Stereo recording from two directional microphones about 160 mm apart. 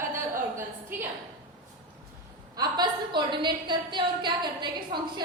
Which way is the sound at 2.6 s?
25° right (ahead or behind).